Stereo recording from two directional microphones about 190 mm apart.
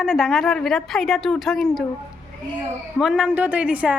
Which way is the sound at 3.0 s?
5° right (ahead or behind).